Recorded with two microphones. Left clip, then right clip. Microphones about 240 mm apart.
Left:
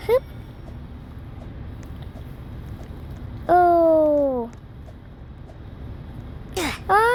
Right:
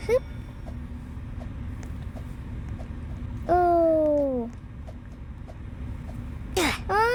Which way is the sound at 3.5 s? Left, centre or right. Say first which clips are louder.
Left 5 dB; centre.